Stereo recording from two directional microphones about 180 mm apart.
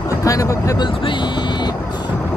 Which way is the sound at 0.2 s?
20° left (ahead or behind).